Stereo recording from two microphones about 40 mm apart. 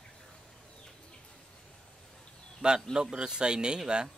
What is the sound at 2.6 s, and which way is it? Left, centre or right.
A man's voice, centre.